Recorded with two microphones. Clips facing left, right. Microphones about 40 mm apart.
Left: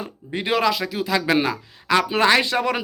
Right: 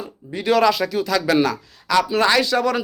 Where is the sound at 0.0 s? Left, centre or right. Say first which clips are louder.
Left 1 dB; left.